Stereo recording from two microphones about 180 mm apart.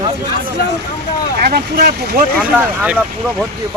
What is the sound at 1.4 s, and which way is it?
Speech, 55° right (ahead or behind).